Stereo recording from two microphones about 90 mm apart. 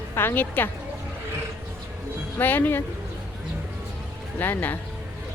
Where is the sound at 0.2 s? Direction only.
25° left (ahead or behind).